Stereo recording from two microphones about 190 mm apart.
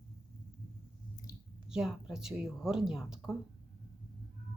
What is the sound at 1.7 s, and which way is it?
A woman's voice, 5° right (ahead or behind).